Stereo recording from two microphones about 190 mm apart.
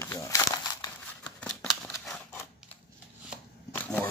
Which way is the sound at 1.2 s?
5° left (ahead or behind).